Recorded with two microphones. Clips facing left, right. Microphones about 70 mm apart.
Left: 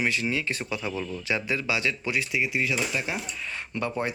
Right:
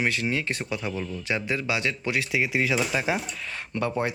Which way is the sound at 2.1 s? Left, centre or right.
Right.